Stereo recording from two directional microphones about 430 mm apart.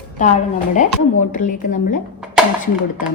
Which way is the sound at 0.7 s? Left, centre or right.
Centre.